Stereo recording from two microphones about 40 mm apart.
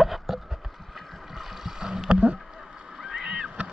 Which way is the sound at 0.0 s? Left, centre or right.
Centre.